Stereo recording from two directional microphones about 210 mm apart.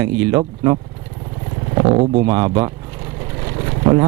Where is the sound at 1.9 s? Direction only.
30° right (ahead or behind).